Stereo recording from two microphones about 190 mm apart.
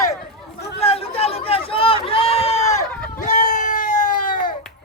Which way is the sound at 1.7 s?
30° left (ahead or behind).